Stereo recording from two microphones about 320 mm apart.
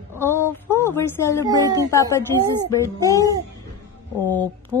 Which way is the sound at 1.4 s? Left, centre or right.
Centre.